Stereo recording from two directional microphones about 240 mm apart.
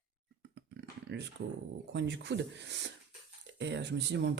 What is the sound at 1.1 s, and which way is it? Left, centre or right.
Speech, right.